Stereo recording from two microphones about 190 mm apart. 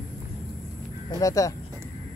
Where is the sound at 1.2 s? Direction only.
15° left (ahead or behind).